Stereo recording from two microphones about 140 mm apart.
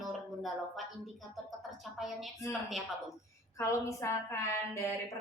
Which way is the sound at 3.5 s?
20° left (ahead or behind).